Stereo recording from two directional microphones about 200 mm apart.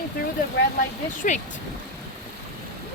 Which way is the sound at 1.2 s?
40° left (ahead or behind).